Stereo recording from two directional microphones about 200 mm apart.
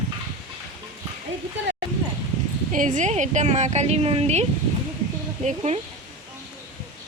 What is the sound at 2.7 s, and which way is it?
A woman's voice, 40° right (ahead or behind).